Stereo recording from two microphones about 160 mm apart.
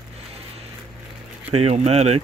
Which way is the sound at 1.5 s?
40° right (ahead or behind).